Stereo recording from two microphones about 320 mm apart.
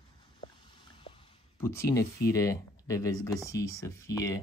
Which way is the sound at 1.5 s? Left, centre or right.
Centre.